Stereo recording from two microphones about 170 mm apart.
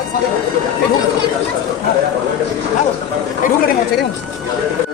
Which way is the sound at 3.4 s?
50° left (ahead or behind).